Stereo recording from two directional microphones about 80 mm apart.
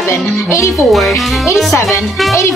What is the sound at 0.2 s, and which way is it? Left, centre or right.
Speech, centre.